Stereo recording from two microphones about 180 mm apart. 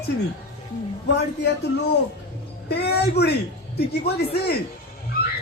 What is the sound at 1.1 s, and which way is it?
A man's voice, 65° left (ahead or behind).